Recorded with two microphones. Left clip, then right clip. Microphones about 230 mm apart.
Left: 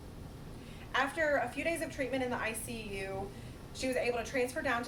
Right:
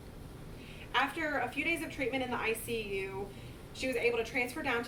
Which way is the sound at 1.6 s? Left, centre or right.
Centre.